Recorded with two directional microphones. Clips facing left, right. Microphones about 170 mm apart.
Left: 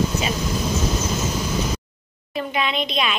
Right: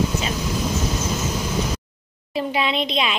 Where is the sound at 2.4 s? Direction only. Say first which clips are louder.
Right 2 dB; 25° right (ahead or behind).